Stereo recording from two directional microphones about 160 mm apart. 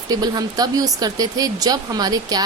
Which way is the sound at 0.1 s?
25° right (ahead or behind).